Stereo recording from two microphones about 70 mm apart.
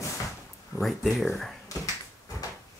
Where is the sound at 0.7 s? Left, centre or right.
Centre.